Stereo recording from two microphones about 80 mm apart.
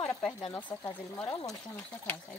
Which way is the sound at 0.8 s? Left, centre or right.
Left.